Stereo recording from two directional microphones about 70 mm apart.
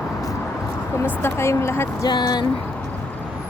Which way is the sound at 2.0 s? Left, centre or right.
Left.